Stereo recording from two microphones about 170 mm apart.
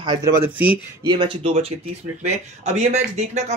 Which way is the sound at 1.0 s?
25° right (ahead or behind).